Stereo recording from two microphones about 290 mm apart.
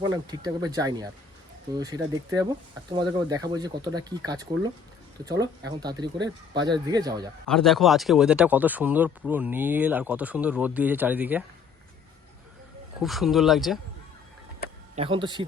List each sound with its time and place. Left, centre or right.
0.0 s speech: centre
7.4 s speech: centre
13.0 s speech: centre
14.9 s speech: centre